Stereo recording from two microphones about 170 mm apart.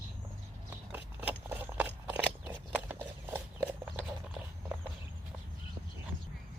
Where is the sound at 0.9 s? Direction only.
10° right (ahead or behind).